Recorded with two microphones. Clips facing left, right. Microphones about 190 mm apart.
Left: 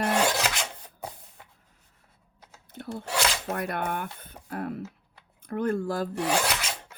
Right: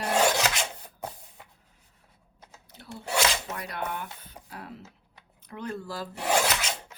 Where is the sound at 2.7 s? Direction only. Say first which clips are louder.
Left 8 dB; 55° left (ahead or behind).